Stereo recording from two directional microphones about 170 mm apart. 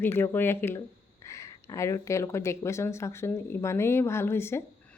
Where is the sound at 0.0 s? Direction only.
10° left (ahead or behind).